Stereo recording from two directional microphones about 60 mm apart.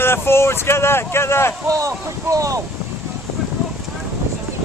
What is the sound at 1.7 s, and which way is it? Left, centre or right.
Speech, right.